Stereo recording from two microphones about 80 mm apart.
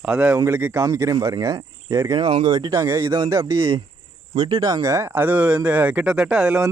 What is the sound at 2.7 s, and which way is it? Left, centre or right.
Speech, right.